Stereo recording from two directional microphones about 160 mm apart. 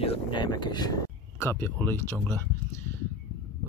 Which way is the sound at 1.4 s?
15° left (ahead or behind).